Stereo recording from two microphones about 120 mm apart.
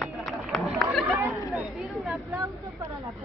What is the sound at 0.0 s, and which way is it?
Run, centre (ahead or behind).